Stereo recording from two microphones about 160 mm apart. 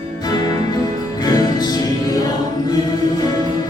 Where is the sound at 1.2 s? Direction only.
25° left (ahead or behind).